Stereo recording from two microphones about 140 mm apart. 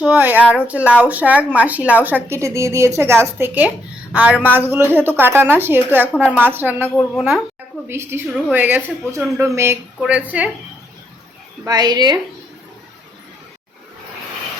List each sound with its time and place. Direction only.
0.0 s a woman's voice: 10° right (ahead or behind)
7.2 s a woman's voice: centre (ahead or behind)
7.9 s a woman's voice: 15° right (ahead or behind)
11.6 s a woman's voice: 30° right (ahead or behind)